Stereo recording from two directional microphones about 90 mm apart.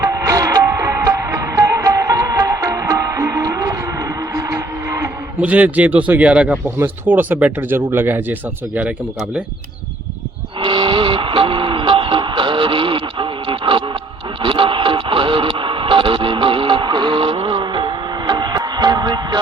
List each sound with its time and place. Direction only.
0.0 s music: 35° right (ahead or behind)
5.4 s speech: 15° right (ahead or behind)
6.7 s speech: 25° right (ahead or behind)
10.6 s music: 65° right (ahead or behind)
14.4 s radio: 70° right (ahead or behind); by 19.4 s 50° right (ahead or behind)